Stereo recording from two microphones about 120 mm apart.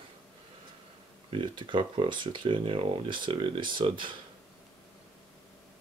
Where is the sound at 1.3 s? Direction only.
45° right (ahead or behind).